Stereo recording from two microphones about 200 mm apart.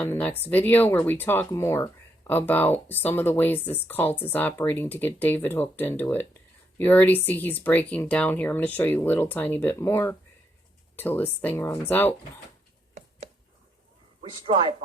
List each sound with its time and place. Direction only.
0.0 s speech: 10° left (ahead or behind)
14.2 s speech: 30° right (ahead or behind)